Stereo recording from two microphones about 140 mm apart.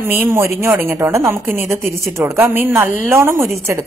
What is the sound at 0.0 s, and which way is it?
Speech, 15° right (ahead or behind).